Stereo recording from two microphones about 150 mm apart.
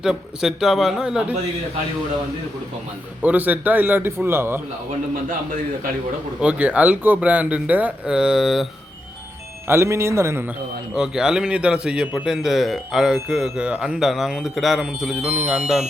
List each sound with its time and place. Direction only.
0.0 s speech: 5° right (ahead or behind)
3.2 s speech: 10° right (ahead or behind)
5.3 s a man's voice: 65° right (ahead or behind)
6.4 s speech: 10° right (ahead or behind)
9.6 s speech: 15° right (ahead or behind)
10.9 s speech: 5° right (ahead or behind)